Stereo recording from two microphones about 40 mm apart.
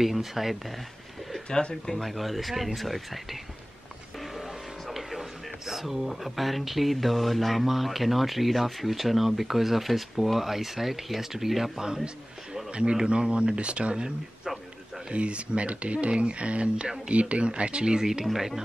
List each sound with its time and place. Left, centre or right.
0.0 s speech: centre
1.5 s speech: left
1.9 s speech: centre
2.1 s speech: centre
4.4 s a sound: centre
5.7 s speech: centre
11.8 s speech: centre
13.1 s speech: right
18.2 s speech: centre